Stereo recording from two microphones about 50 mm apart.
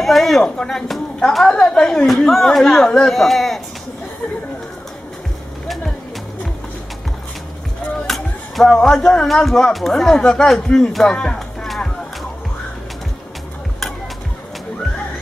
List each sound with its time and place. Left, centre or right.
0.0 s speech: centre
1.4 s speech: centre
2.0 s speech: centre
8.1 s music: centre
8.7 s speech: centre
11.1 s speech: centre
11.6 s music: centre